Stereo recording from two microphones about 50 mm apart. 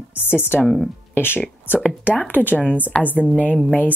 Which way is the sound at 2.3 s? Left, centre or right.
Left.